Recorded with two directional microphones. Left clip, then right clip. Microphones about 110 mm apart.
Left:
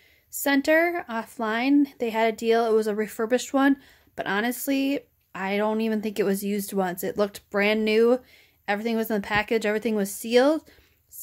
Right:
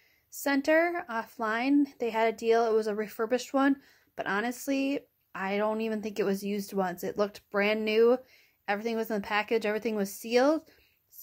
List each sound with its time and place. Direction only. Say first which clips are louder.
0.4 s speech: left 4 dB; 30° left (ahead or behind)